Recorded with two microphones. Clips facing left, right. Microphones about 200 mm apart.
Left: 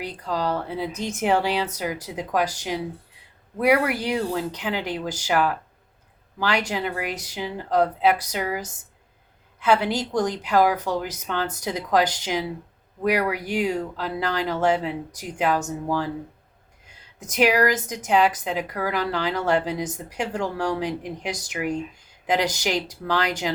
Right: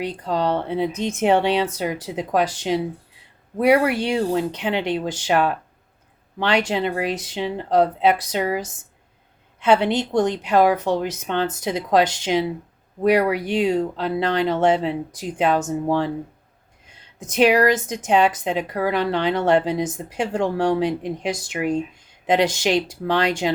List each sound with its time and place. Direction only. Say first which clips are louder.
0.0 s a woman's voice: right 4 dB; 30° right (ahead or behind)
17.2 s a woman's voice: right 4 dB; 30° right (ahead or behind)